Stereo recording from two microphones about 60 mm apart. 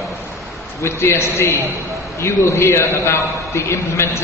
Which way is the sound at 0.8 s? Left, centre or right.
Left.